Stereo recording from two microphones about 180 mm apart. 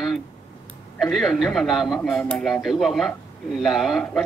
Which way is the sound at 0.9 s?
Centre (ahead or behind).